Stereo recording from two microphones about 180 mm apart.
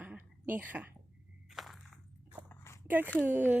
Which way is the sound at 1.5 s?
Centre (ahead or behind).